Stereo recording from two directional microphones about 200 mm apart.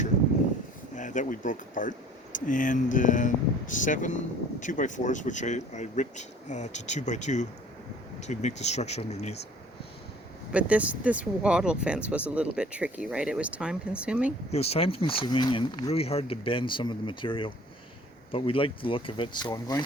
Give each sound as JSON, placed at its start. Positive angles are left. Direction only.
{"t": 0.9, "sound": "speech", "side_deg": 40}
{"t": 10.5, "sound": "speech", "side_deg": -5}
{"t": 14.5, "sound": "speech", "side_deg": 30}